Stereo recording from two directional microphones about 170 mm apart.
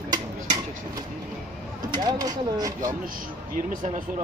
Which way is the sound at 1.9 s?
25° right (ahead or behind).